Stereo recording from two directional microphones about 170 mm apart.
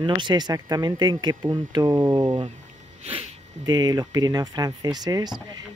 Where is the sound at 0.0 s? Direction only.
25° right (ahead or behind).